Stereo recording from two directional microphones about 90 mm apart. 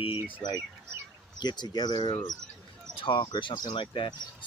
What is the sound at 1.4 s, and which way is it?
Speech, 50° left (ahead or behind).